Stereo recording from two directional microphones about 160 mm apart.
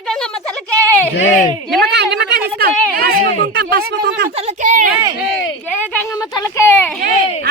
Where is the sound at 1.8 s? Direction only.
90° right.